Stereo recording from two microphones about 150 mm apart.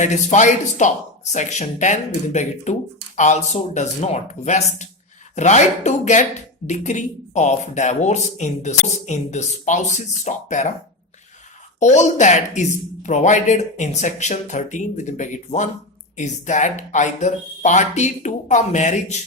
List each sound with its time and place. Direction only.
0.0 s speech: 50° left (ahead or behind)
11.8 s speech: 55° left (ahead or behind)